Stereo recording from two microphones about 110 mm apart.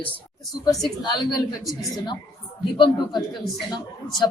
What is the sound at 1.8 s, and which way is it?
Speech, 35° left (ahead or behind).